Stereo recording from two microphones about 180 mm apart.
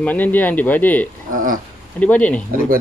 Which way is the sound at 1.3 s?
50° right (ahead or behind).